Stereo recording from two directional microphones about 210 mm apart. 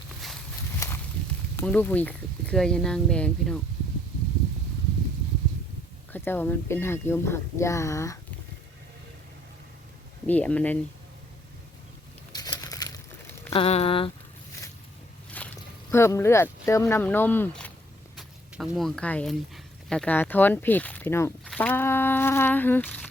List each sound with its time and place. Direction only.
0.8 s walk: 15° left (ahead or behind)
1.5 s speech: 10° left (ahead or behind)
6.1 s speech: 10° left (ahead or behind)
10.2 s speech: 5° left (ahead or behind)
12.3 s crumpling: 20° left (ahead or behind)
13.5 s speech: 30° left (ahead or behind)
15.3 s speech: 5° left (ahead or behind)
18.2 s speech: centre (ahead or behind)